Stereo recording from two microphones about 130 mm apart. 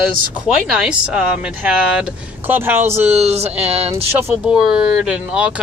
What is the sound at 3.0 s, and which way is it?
Speech, 55° right (ahead or behind).